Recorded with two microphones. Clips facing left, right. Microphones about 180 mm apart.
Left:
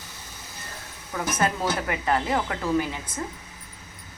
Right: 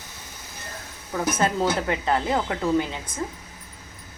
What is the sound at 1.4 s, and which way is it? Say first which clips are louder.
Speech: right 2 dB; 25° right (ahead or behind).